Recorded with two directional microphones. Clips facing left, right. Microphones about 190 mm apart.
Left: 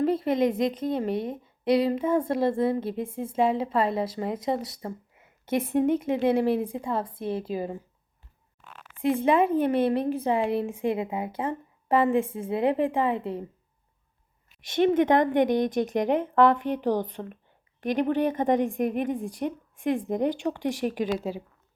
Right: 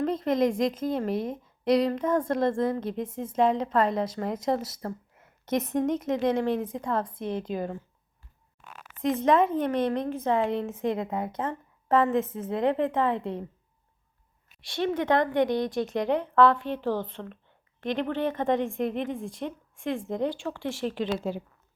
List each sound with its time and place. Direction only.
0.0 s a woman's voice: 5° left (ahead or behind)
9.2 s a woman's voice: 10° left (ahead or behind)
14.7 s a woman's voice: 20° left (ahead or behind)